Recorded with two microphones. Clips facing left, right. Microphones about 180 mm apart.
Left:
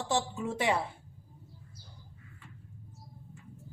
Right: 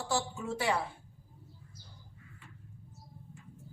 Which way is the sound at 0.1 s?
20° left (ahead or behind).